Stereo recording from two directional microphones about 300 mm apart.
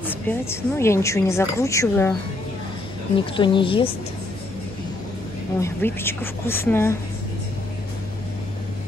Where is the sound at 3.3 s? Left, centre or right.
Centre.